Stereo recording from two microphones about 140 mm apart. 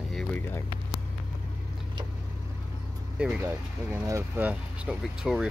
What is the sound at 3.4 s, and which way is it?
Speech, 20° right (ahead or behind).